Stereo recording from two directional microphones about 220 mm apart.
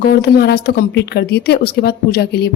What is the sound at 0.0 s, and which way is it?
Speech, 45° left (ahead or behind).